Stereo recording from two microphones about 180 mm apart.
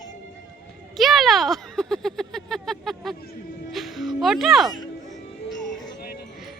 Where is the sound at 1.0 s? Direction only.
Centre (ahead or behind).